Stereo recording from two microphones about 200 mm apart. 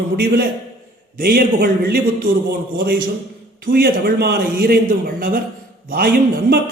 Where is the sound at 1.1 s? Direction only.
50° right (ahead or behind).